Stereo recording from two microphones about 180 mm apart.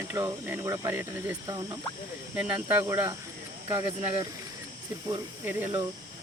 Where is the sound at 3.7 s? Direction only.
20° right (ahead or behind).